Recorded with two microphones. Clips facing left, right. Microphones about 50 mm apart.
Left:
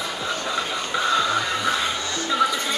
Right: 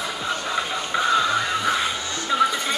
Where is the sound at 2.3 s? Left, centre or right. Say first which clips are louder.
Right 1 dB; centre.